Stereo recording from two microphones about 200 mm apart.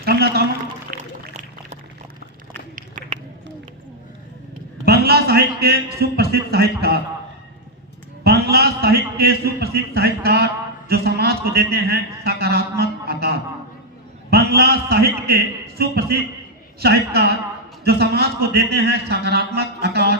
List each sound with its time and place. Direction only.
0.0 s a sound: 50° right (ahead or behind)
4.9 s a man's voice: 50° right (ahead or behind)
8.2 s a man's voice: 50° right (ahead or behind)